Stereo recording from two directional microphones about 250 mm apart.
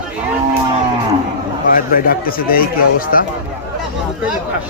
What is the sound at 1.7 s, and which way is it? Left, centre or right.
Speech, left.